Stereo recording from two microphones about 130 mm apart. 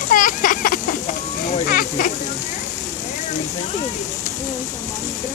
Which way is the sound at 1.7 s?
90° left.